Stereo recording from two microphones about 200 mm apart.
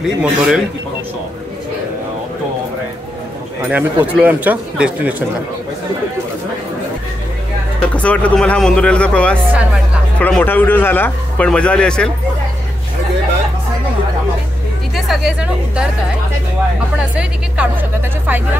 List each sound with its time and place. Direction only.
0.0 s speech: centre (ahead or behind)
3.6 s speech: 10° right (ahead or behind)
7.8 s a man's voice: 5° left (ahead or behind)
15.0 s speech: centre (ahead or behind)
17.1 s speech: 5° right (ahead or behind)